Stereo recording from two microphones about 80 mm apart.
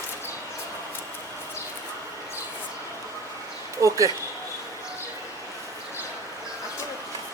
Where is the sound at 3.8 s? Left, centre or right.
Right.